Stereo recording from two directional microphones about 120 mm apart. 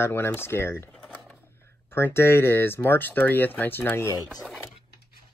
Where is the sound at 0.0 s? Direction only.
20° left (ahead or behind).